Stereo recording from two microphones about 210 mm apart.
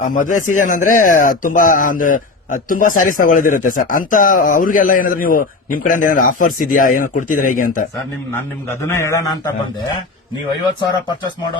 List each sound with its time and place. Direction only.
0.0 s speech: 35° left (ahead or behind)
8.9 s a man's voice: 15° left (ahead or behind)